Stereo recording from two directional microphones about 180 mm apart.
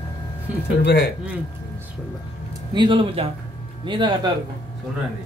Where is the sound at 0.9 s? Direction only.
65° left (ahead or behind).